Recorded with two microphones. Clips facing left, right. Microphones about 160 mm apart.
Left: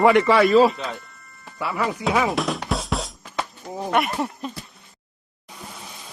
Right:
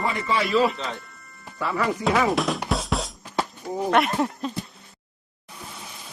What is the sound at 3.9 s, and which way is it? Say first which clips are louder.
Speech: right 1 dB; centre (ahead or behind).